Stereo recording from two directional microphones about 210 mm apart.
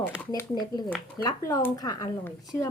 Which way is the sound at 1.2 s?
20° left (ahead or behind).